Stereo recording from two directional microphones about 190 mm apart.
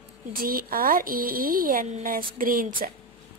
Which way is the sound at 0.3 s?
50° right (ahead or behind).